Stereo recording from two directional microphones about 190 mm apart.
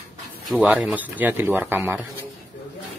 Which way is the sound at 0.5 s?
5° right (ahead or behind).